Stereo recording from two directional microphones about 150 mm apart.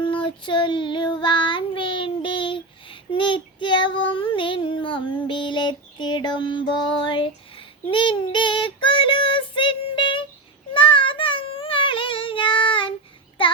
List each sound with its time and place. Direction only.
0.0 s child singing: 35° left (ahead or behind)